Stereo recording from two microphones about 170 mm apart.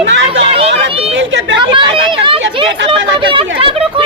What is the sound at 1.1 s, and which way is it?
Speech, 90° right.